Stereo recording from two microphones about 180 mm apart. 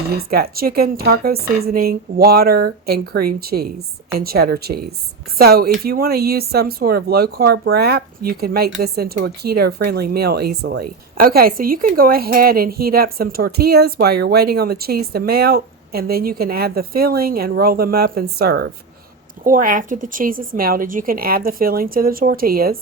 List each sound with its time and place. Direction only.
0.2 s speech: 60° right (ahead or behind)
19.5 s a woman's voice: 50° right (ahead or behind)